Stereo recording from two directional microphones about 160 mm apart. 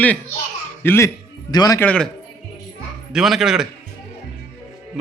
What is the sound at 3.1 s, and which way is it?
Speech, centre (ahead or behind).